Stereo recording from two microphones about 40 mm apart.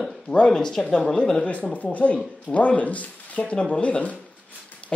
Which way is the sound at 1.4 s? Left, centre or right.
Left.